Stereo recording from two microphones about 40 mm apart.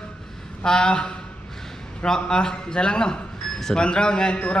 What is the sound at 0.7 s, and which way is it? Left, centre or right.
Speech, left.